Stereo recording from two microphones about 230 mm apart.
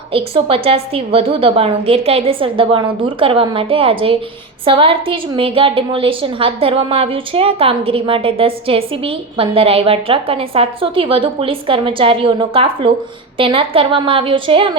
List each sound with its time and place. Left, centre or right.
0.1 s a woman's voice: right